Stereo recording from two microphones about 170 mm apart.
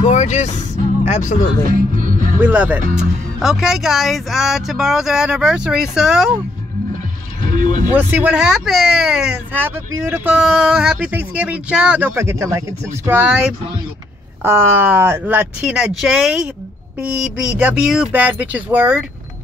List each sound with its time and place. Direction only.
0.0 s speech: 45° left (ahead or behind)
1.6 s music: 50° right (ahead or behind)
2.4 s speech: 10° right (ahead or behind)
7.9 s speech: 10° right (ahead or behind)